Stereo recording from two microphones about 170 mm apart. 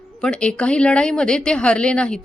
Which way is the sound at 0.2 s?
5° left (ahead or behind).